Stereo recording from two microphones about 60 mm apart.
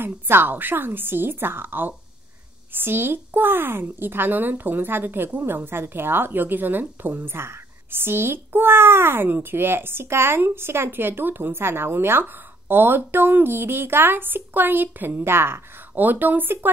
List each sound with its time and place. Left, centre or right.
0.0 s a woman's voice: right
15.9 s a woman's voice: right